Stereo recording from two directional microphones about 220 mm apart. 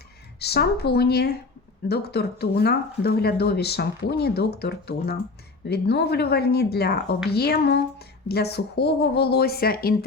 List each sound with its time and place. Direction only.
0.3 s speech: 50° left (ahead or behind)